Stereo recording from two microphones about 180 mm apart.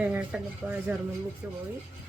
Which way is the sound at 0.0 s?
10° right (ahead or behind).